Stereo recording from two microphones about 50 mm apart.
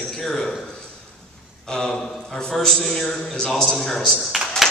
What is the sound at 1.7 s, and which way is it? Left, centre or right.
A man's voice, centre.